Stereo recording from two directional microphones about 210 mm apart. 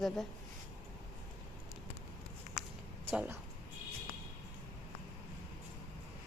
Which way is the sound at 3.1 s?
10° right (ahead or behind).